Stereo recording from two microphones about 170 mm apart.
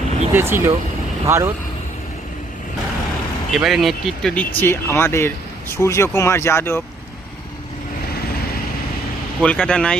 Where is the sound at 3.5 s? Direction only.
Centre (ahead or behind); by 6.8 s 15° left (ahead or behind).